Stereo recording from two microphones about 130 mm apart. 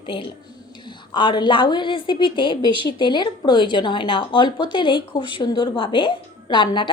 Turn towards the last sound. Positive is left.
turn(degrees=40)  # may be behind; listen again after turning